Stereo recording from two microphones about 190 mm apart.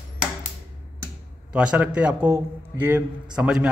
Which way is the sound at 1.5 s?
5° right (ahead or behind).